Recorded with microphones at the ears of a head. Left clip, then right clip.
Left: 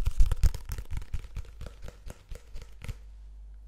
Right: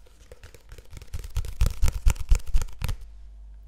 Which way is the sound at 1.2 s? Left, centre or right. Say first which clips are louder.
Right 11 dB; right.